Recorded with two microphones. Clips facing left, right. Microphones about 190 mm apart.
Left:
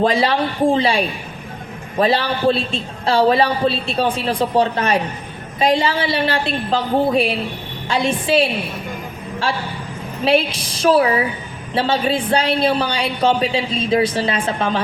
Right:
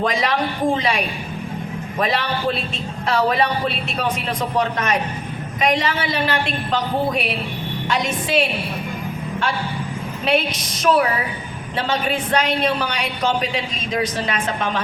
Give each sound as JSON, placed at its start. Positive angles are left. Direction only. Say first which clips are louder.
{"t": 0.0, "sound": "a woman's voice", "louder": "left 4 dB", "side_deg": 30}
{"t": 10.2, "sound": "a woman's voice", "louder": "left 4 dB", "side_deg": 30}